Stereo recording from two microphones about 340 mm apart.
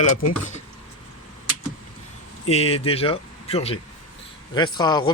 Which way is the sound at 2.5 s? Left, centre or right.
Centre.